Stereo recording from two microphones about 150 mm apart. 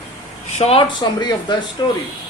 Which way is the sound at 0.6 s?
40° left (ahead or behind).